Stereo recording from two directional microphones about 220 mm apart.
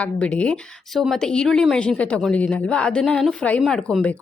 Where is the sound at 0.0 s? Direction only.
5° left (ahead or behind).